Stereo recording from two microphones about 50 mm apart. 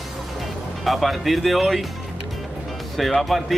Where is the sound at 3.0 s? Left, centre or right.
Centre.